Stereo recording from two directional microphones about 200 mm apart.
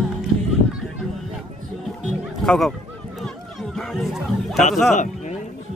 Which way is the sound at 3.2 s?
Centre (ahead or behind).